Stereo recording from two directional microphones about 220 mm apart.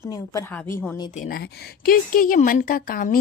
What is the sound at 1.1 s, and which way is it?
Speech, 35° left (ahead or behind).